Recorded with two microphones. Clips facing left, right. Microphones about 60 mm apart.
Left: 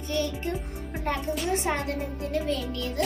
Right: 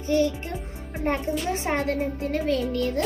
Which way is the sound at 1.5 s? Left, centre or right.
Right.